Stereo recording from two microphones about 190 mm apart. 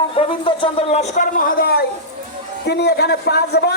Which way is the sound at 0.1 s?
30° left (ahead or behind).